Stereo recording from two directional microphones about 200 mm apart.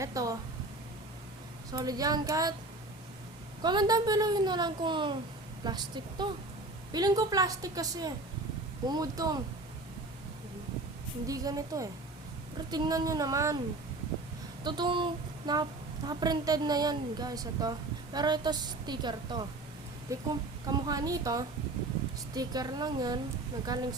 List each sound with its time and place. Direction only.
0.0 s a woman's voice: 15° right (ahead or behind)
1.7 s speech: 20° right (ahead or behind)
3.6 s a woman's voice: 20° right (ahead or behind)
11.3 s a woman's voice: 15° right (ahead or behind)
14.6 s a sound: 20° right (ahead or behind)
16.0 s a woman's voice: 20° right (ahead or behind)